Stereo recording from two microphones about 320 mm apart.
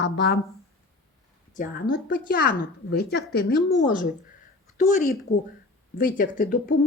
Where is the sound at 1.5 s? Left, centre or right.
Left.